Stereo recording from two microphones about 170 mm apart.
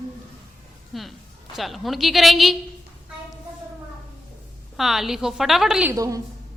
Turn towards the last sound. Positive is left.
turn(degrees=-20)  # may be behind; listen again after turning